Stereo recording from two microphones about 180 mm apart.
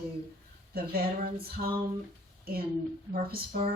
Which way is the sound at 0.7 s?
55° right (ahead or behind).